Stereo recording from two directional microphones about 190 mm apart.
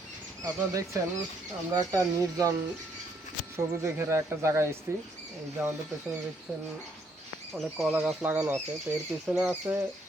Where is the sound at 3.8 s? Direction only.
15° right (ahead or behind).